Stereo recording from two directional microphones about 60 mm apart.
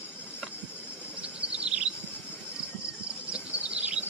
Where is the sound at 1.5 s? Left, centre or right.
Centre.